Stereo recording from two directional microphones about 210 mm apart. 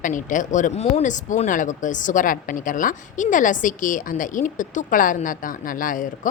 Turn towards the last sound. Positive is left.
turn(degrees=40)  # may be behind; listen again after turning